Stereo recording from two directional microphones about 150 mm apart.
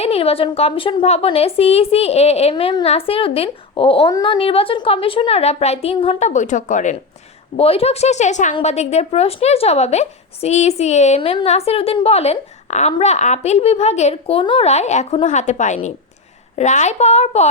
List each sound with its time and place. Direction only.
0.0 s a woman's voice: 40° left (ahead or behind)
6.1 s speech: 55° left (ahead or behind)
7.5 s a woman's voice: 40° left (ahead or behind)